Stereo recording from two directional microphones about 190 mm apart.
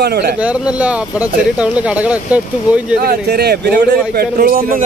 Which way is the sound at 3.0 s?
55° right (ahead or behind).